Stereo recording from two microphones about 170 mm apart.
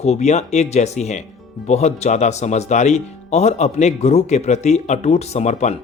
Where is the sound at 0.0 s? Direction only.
40° left (ahead or behind).